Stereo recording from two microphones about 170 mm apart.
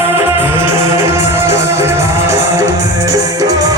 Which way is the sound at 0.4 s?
15° right (ahead or behind).